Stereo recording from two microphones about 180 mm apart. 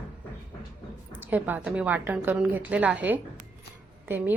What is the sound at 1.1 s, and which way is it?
A woman's voice, 10° right (ahead or behind).